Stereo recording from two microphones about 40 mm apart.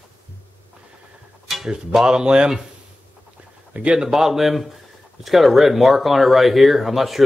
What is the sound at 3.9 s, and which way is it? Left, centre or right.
Speech, centre.